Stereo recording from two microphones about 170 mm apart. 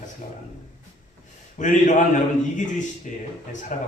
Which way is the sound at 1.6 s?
45° left (ahead or behind).